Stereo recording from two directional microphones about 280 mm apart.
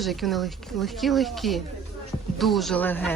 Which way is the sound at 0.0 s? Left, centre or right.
Centre.